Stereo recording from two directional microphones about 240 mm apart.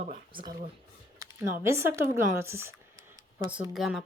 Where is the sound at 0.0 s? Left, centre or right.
Right.